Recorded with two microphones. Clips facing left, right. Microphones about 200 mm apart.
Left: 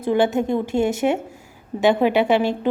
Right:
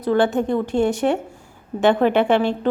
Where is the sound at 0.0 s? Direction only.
20° left (ahead or behind).